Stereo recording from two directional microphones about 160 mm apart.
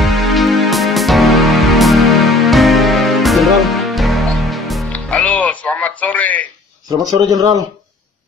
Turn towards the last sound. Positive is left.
turn(degrees=-25)  # may be behind; listen again after turning